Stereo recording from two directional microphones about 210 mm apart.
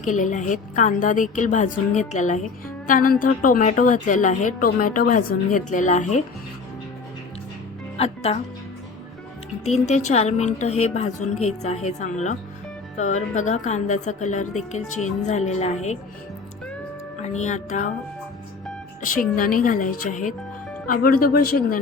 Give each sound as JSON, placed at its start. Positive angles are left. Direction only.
{"t": 0.0, "sound": "a woman's voice", "side_deg": 35}
{"t": 7.9, "sound": "speech", "side_deg": 30}
{"t": 9.6, "sound": "a woman's voice", "side_deg": 30}
{"t": 17.2, "sound": "a woman's voice", "side_deg": 35}
{"t": 19.0, "sound": "a woman's voice", "side_deg": 40}